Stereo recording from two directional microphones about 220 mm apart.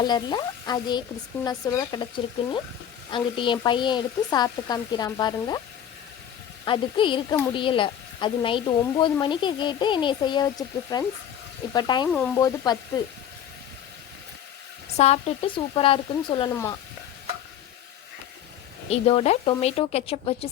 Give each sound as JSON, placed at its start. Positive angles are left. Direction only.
{"t": 0.0, "sound": "a woman's voice", "side_deg": 20}
{"t": 6.7, "sound": "a woman's voice", "side_deg": 20}
{"t": 12.0, "sound": "speech", "side_deg": 5}
{"t": 12.4, "sound": "speech", "side_deg": 15}
{"t": 14.9, "sound": "a woman's voice", "side_deg": 30}
{"t": 18.9, "sound": "a woman's voice", "side_deg": 25}